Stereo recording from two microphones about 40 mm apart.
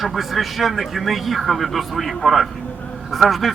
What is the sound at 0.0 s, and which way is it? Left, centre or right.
A man's voice, centre.